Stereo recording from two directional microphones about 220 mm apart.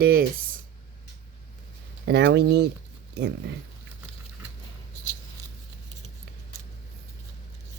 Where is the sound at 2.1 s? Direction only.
50° right (ahead or behind).